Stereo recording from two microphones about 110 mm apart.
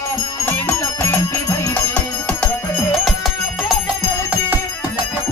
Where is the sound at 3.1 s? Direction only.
Centre (ahead or behind).